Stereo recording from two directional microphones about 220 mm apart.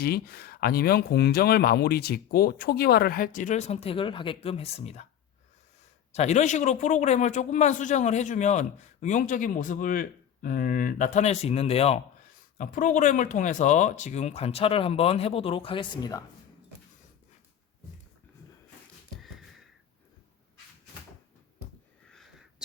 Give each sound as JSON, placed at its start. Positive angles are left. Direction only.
{"t": 0.0, "sound": "speech", "side_deg": 45}
{"t": 6.1, "sound": "a man's voice", "side_deg": 30}
{"t": 22.1, "sound": "a sound", "side_deg": 0}